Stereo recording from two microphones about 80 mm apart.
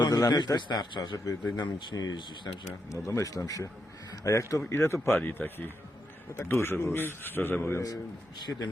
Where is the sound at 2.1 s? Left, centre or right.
Left.